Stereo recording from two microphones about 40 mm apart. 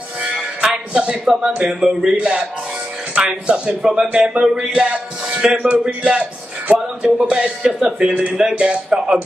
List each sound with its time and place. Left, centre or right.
0.3 s music: centre
0.9 s a man's voice: right
1.2 s speech: centre
2.1 s speech: right
3.4 s speech: right
4.7 s music: right
5.6 s speech: right
6.7 s music: right
7.6 s speech: centre
8.1 s speech: right